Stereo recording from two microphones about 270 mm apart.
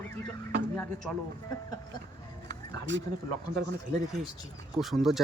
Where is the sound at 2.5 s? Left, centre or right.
Right.